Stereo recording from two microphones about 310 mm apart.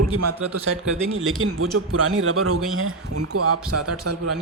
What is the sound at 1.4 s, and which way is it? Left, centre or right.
A man's voice, right.